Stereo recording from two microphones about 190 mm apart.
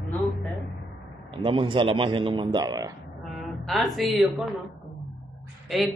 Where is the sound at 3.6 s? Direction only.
Centre (ahead or behind).